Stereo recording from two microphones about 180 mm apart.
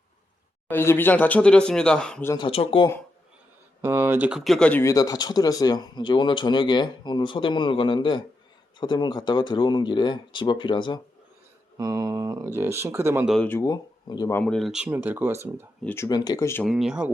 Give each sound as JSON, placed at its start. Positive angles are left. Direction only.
{"t": 0.7, "sound": "speech", "side_deg": 10}
{"t": 2.3, "sound": "speech", "side_deg": 30}
{"t": 3.8, "sound": "speech", "side_deg": -10}
{"t": 11.8, "sound": "speech", "side_deg": -20}
{"t": 13.2, "sound": "speech", "side_deg": 0}
{"t": 13.5, "sound": "speech", "side_deg": 20}
{"t": 14.3, "sound": "speech", "side_deg": 5}
{"t": 15.8, "sound": "speech", "side_deg": 10}
{"t": 16.0, "sound": "speech", "side_deg": 20}
{"t": 16.6, "sound": "speech", "side_deg": 0}